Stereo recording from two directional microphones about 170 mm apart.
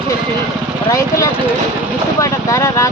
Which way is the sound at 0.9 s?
20° left (ahead or behind).